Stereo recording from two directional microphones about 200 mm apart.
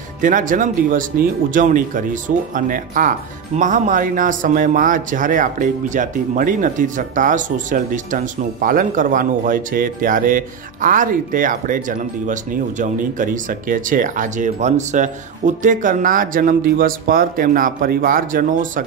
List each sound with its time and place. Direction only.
0.2 s speech: 40° right (ahead or behind)